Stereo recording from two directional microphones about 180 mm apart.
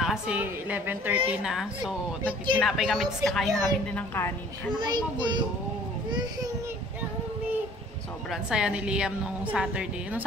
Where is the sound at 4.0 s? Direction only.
10° left (ahead or behind).